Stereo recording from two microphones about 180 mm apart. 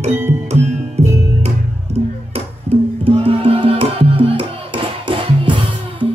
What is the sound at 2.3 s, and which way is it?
Music, 30° right (ahead or behind).